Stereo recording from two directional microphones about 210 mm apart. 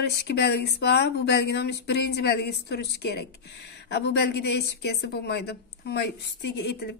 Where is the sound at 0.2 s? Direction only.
50° left (ahead or behind).